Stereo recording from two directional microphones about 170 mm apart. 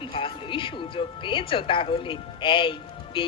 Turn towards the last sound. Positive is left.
turn(degrees=30)  # may be behind; listen again after turning